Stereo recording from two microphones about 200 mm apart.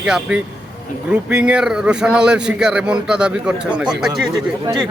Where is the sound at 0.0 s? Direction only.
5° right (ahead or behind).